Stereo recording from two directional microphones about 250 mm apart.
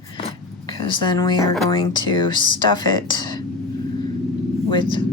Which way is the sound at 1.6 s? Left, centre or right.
Centre.